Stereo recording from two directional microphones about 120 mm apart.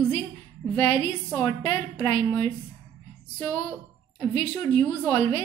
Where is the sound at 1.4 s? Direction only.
40° left (ahead or behind).